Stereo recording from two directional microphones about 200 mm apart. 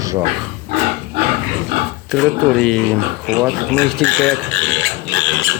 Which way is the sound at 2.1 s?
5° left (ahead or behind).